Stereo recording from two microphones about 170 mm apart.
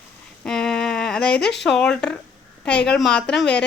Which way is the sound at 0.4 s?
5° left (ahead or behind).